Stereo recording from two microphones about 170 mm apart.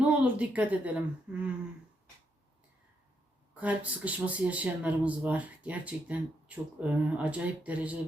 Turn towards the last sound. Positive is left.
turn(degrees=-10)  # may be behind; listen again after turning